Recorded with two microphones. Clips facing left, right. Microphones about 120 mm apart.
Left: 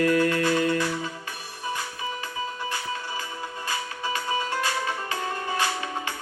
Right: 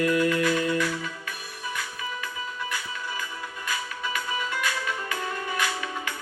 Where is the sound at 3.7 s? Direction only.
30° left (ahead or behind).